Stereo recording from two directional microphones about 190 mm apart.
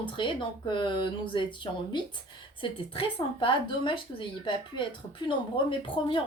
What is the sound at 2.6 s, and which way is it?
Speech, 25° left (ahead or behind).